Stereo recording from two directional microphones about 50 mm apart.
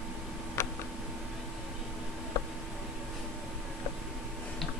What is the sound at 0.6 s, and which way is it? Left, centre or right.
Tick, left.